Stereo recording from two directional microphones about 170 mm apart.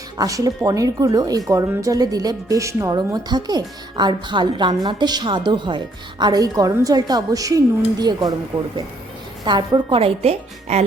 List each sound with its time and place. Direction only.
0.2 s speech: 20° right (ahead or behind)
8.5 s speech: 15° right (ahead or behind)
9.4 s a woman's voice: 25° right (ahead or behind)